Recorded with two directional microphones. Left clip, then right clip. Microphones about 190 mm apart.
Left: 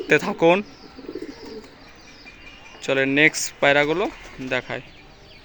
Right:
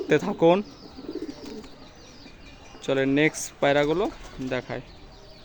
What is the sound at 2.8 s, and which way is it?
Speech, 5° right (ahead or behind).